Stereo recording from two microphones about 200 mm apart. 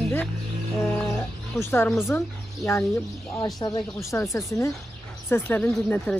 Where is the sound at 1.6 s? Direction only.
10° left (ahead or behind).